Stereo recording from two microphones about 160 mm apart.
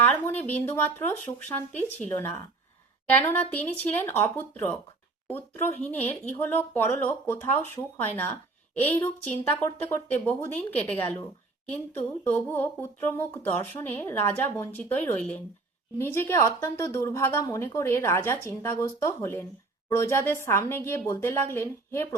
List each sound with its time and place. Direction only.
0.0 s speech: 10° left (ahead or behind)